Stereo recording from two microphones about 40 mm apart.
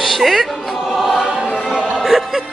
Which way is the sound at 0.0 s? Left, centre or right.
Centre.